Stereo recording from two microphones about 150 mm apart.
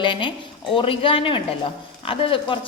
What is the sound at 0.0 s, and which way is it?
A woman's voice, 30° left (ahead or behind).